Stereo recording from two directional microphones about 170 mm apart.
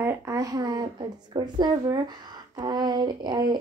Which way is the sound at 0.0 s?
20° right (ahead or behind).